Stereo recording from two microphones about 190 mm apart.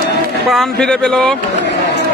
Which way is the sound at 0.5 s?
Centre (ahead or behind).